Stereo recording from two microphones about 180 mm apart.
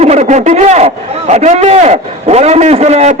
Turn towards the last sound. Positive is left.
turn(degrees=-40)  # may be behind; listen again after turning